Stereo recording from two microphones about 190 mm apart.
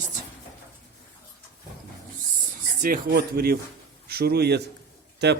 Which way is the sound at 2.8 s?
50° right (ahead or behind).